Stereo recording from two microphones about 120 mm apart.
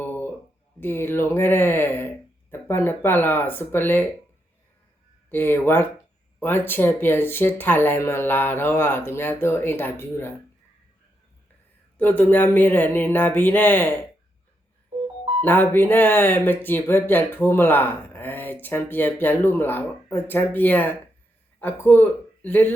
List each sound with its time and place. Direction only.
0.0 s a sound: 15° left (ahead or behind)
0.8 s speech: 20° left (ahead or behind)
5.3 s speech: 20° left (ahead or behind)
11.9 s speech: 15° left (ahead or behind)
15.4 s speech: 15° left (ahead or behind)